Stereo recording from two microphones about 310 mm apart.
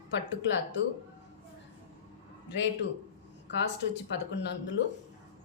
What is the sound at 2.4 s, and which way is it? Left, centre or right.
Speech, left.